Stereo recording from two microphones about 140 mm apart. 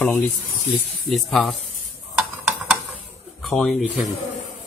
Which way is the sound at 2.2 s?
5° right (ahead or behind).